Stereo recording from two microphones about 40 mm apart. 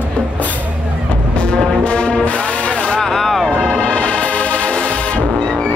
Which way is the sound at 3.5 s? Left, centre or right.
Left.